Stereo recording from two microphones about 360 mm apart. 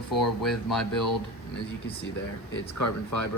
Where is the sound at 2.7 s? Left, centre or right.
Left.